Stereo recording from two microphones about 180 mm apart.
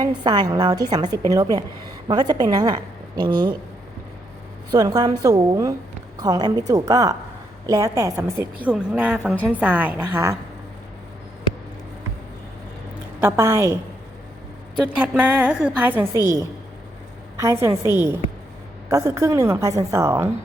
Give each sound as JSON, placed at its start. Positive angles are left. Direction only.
{"t": 0.0, "sound": "a woman's voice", "side_deg": -25}
{"t": 4.7, "sound": "a woman's voice", "side_deg": -20}
{"t": 13.2, "sound": "a woman's voice", "side_deg": -15}
{"t": 14.9, "sound": "a woman's voice", "side_deg": -5}
{"t": 17.3, "sound": "a woman's voice", "side_deg": -15}